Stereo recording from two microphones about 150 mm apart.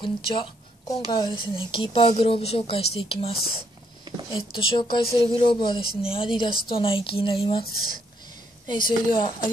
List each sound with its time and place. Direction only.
0.0 s a woman's voice: 35° left (ahead or behind)
7.6 s speech: 90° left
8.6 s a woman's voice: 30° left (ahead or behind)